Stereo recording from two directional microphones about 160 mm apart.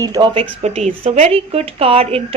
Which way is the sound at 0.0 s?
20° right (ahead or behind).